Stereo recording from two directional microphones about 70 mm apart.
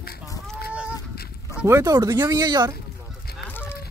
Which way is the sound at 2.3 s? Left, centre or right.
Right.